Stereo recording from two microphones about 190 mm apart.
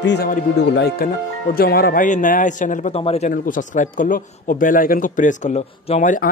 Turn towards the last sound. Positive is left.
turn(degrees=45)  # may be behind; listen again after turning